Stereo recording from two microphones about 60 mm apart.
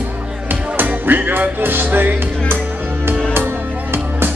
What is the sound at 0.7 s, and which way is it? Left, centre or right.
Music, right.